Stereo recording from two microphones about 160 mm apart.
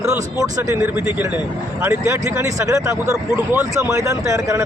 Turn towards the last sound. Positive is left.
turn(degrees=-20)  # may be behind; listen again after turning